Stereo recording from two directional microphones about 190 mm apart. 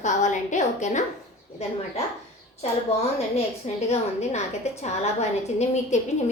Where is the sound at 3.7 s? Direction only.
35° left (ahead or behind).